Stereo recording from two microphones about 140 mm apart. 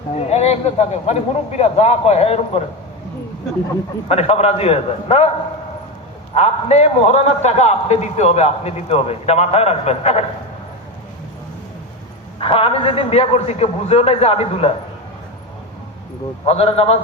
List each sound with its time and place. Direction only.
0.2 s a man's voice: 50° left (ahead or behind)
4.1 s a man's voice: 45° left (ahead or behind)
6.3 s a man's voice: 50° left (ahead or behind)
12.4 s a man's voice: 40° left (ahead or behind)
16.5 s a man's voice: 45° left (ahead or behind)